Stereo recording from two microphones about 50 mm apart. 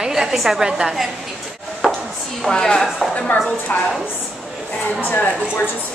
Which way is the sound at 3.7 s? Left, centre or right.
Left.